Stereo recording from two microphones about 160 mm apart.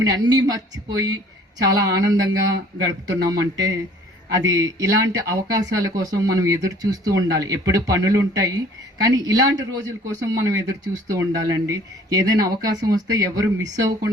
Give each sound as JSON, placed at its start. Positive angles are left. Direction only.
{"t": 0.0, "sound": "speech", "side_deg": -25}